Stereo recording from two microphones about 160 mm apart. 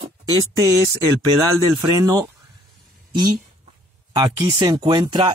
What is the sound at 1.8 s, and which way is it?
Speech, 25° right (ahead or behind).